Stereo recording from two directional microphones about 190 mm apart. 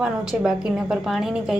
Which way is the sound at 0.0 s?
5° right (ahead or behind).